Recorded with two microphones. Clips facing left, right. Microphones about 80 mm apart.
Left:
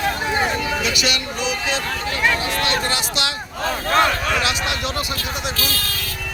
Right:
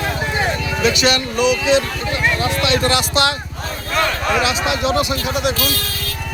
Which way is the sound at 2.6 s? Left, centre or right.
Right.